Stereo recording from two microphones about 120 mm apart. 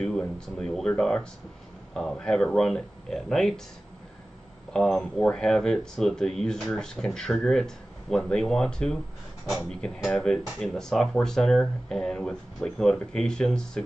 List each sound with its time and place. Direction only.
0.0 s speech: 5° left (ahead or behind)
4.7 s speech: 5° left (ahead or behind)